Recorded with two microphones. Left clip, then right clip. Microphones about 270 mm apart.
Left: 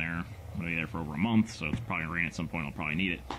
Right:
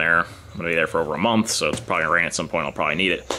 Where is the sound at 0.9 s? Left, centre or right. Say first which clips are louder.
Right 17 dB; left.